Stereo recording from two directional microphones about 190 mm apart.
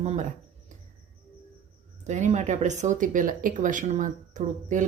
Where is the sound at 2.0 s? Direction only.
40° right (ahead or behind).